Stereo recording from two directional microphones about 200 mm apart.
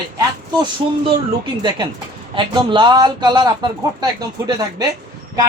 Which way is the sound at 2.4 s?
25° right (ahead or behind).